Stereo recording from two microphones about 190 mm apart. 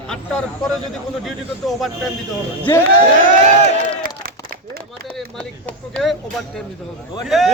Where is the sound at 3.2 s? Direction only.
40° right (ahead or behind).